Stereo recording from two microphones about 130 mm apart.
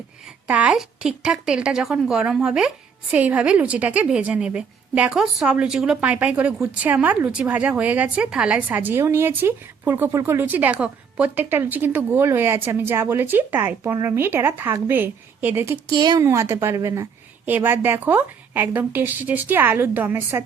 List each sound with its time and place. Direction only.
0.4 s a woman's voice: 10° right (ahead or behind)
15.9 s a woman's voice: 30° right (ahead or behind)
16.2 s a woman's voice: 20° right (ahead or behind)